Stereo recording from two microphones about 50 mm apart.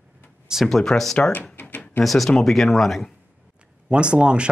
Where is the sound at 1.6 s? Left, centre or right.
Left.